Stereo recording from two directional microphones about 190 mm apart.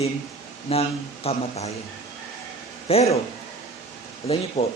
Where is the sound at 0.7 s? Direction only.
30° left (ahead or behind).